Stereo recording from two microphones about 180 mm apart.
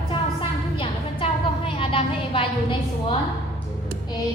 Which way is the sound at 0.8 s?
30° left (ahead or behind).